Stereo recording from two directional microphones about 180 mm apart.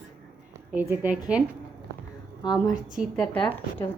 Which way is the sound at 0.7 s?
10° right (ahead or behind).